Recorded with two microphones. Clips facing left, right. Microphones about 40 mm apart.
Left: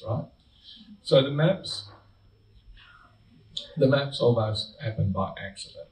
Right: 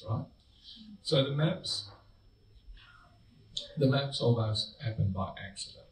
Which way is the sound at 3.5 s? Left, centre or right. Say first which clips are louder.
Left 7 dB; left.